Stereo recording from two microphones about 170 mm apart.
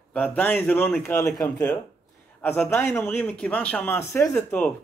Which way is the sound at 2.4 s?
15° left (ahead or behind).